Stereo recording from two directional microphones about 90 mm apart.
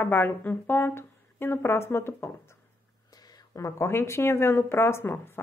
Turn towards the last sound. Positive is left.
turn(degrees=25)  # may be behind; listen again after turning